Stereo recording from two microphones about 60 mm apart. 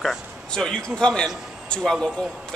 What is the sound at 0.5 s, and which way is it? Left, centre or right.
A man's voice, centre.